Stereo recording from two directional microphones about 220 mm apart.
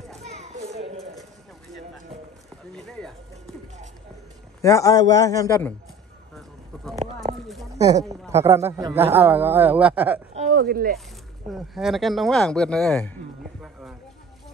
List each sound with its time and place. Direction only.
0.2 s children playing: 30° right (ahead or behind)
2.7 s a sound: centre (ahead or behind)
4.6 s a man's voice: 15° left (ahead or behind)
6.3 s bird: centre (ahead or behind)
7.7 s a sound: 15° right (ahead or behind)
8.3 s a man's voice: 15° right (ahead or behind)
10.3 s a sound: 30° right (ahead or behind)
10.6 s speech: 45° right (ahead or behind)
11.5 s speech: centre (ahead or behind)